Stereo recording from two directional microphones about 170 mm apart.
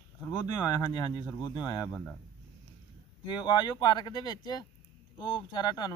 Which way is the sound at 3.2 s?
25° left (ahead or behind).